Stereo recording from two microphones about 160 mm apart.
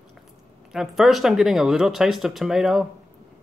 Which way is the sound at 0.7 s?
Centre (ahead or behind).